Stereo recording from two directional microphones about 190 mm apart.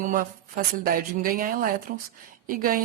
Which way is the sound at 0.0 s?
45° right (ahead or behind).